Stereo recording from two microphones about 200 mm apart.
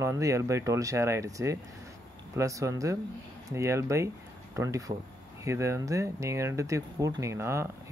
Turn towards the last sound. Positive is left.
turn(degrees=-15)  # may be behind; listen again after turning